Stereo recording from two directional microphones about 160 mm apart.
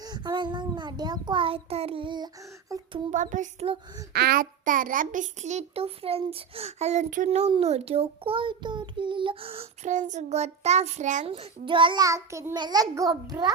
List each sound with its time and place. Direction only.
0.0 s a child's voice: 25° right (ahead or behind)
3.1 s a child's voice: 50° right (ahead or behind)
4.1 s a child's voice: 75° right (ahead or behind); by 7.3 s 50° right (ahead or behind)
7.3 s a child's voice: 35° right (ahead or behind)
11.3 s a child's voice: 35° right (ahead or behind)